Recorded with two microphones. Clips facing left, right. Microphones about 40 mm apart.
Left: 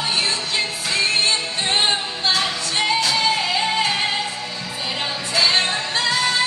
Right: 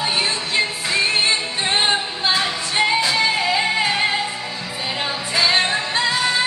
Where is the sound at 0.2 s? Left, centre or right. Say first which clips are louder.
Right 2 dB; centre.